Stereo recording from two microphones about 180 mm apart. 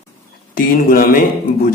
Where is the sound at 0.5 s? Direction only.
55° left (ahead or behind).